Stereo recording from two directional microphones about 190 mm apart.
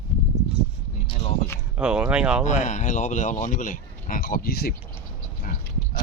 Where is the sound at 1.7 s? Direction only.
5° right (ahead or behind).